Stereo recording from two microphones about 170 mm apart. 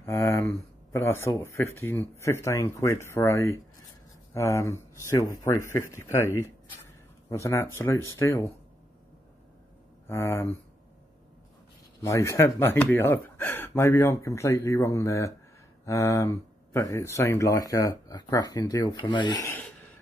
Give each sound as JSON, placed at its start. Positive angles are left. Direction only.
{"t": 0.0, "sound": "speech", "side_deg": 15}
{"t": 7.2, "sound": "speech", "side_deg": 15}
{"t": 10.0, "sound": "speech", "side_deg": 15}
{"t": 12.0, "sound": "speech", "side_deg": 15}